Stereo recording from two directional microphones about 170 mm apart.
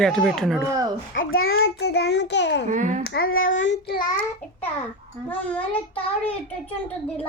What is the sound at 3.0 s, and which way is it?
Child singing, 80° left.